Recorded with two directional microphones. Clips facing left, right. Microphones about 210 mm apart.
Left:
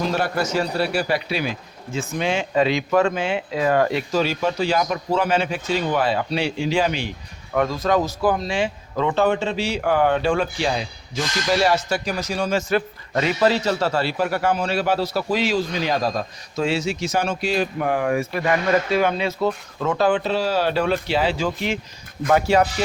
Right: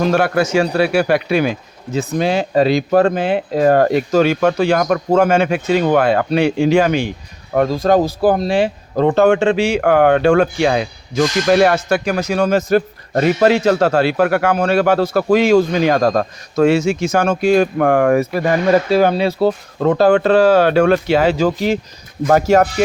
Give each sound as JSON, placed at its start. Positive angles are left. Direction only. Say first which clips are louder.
{"t": 0.0, "sound": "speech", "louder": "right 7 dB", "side_deg": -65}
{"t": 2.0, "sound": "speech", "louder": "right 6 dB", "side_deg": -35}
{"t": 3.3, "sound": "speech", "louder": "right 7 dB", "side_deg": -45}
{"t": 7.5, "sound": "speech", "louder": "right 6 dB", "side_deg": -40}
{"t": 9.2, "sound": "speech", "louder": "right 9 dB", "side_deg": -80}
{"t": 9.7, "sound": "speech", "louder": "right 4 dB", "side_deg": -65}
{"t": 20.1, "sound": "speech", "louder": "right 10 dB", "side_deg": -50}
{"t": 21.1, "sound": "speech", "louder": "right 8 dB", "side_deg": -45}